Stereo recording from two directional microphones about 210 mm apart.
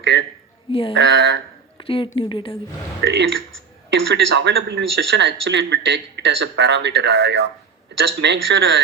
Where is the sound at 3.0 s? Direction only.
55° right (ahead or behind).